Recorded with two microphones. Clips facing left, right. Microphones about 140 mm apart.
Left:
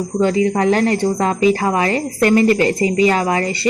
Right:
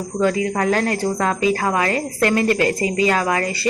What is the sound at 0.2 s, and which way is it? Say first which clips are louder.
Speech: left 3 dB; 25° left (ahead or behind).